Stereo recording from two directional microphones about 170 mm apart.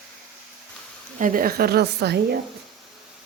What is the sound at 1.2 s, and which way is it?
A woman's voice, 55° right (ahead or behind).